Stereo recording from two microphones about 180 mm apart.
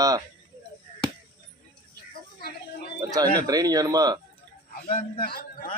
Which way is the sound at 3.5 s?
20° right (ahead or behind).